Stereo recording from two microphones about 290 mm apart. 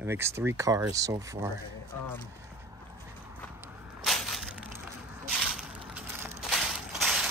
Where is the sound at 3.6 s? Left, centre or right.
Centre.